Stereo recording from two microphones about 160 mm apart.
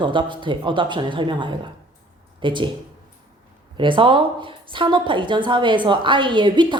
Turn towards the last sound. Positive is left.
turn(degrees=-30)  # may be behind; listen again after turning